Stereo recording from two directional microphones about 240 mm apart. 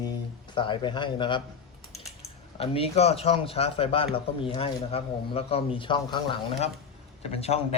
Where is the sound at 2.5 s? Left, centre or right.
Left.